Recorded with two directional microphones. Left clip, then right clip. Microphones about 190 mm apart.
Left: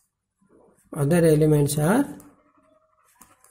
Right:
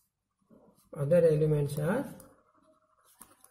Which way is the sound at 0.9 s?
45° left (ahead or behind).